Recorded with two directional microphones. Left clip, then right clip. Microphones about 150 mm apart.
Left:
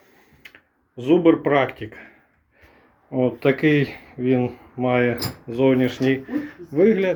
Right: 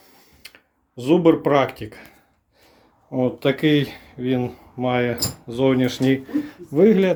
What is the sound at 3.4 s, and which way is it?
Speech, 5° left (ahead or behind).